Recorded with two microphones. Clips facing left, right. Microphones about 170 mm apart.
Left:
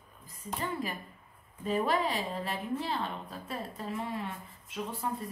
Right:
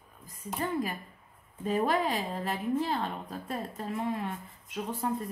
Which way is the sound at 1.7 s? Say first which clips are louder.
Right 2 dB; 45° right (ahead or behind).